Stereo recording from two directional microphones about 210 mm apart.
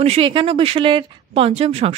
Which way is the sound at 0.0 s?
25° right (ahead or behind).